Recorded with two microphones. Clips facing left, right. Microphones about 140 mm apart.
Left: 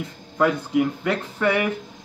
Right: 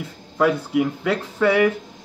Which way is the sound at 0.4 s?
10° right (ahead or behind).